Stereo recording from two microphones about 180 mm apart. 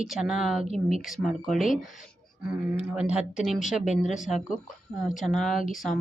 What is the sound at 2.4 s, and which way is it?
Speech, 5° right (ahead or behind).